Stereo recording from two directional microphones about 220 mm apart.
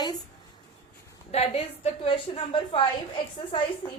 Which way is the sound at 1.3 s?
30° left (ahead or behind).